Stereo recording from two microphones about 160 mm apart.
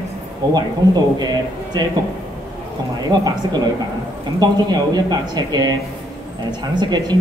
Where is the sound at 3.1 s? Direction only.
25° right (ahead or behind).